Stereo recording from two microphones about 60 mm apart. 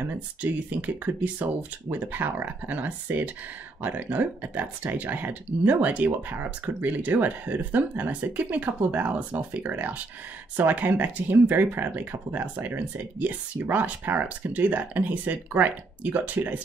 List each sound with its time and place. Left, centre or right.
0.0 s speech: right